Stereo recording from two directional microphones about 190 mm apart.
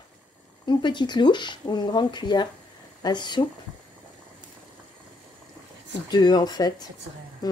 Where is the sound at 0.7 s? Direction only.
25° left (ahead or behind).